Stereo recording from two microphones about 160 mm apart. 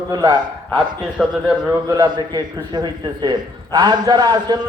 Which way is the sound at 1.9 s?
25° right (ahead or behind).